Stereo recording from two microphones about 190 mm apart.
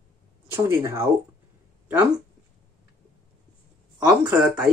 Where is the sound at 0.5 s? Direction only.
15° right (ahead or behind).